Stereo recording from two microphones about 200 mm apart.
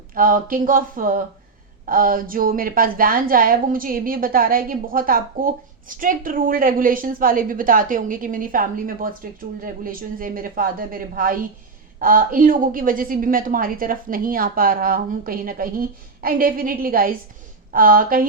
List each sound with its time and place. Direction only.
0.1 s a woman's voice: 45° right (ahead or behind)